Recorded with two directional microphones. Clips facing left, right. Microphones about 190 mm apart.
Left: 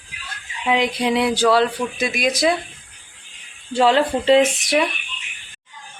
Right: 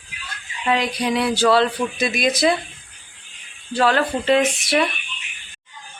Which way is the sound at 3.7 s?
25° left (ahead or behind).